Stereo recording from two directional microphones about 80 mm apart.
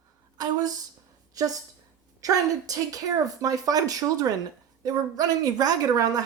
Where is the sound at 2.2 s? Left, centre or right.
Right.